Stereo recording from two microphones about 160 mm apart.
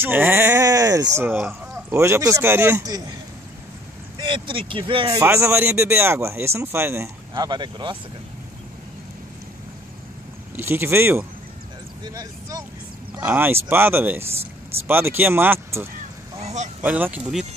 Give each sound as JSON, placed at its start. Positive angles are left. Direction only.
{"t": 0.0, "sound": "speech", "side_deg": -15}
{"t": 4.2, "sound": "speech", "side_deg": -30}
{"t": 7.3, "sound": "speech", "side_deg": -25}
{"t": 10.5, "sound": "speech", "side_deg": -15}
{"t": 13.2, "sound": "speech", "side_deg": -10}
{"t": 16.3, "sound": "a sound", "side_deg": -45}
{"t": 16.8, "sound": "speech", "side_deg": -10}